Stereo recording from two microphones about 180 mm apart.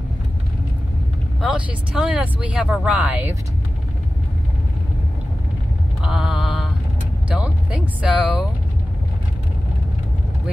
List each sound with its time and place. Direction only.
1.4 s speech: 5° right (ahead or behind)
6.0 s mantra: centre (ahead or behind)
7.2 s speech: 5° right (ahead or behind)